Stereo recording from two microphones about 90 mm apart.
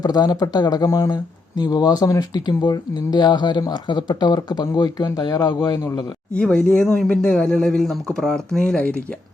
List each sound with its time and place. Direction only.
0.0 s speech: 45° left (ahead or behind)
1.1 s speech: 50° left (ahead or behind)
2.5 s speech: 55° left (ahead or behind)
6.3 s speech: 10° left (ahead or behind)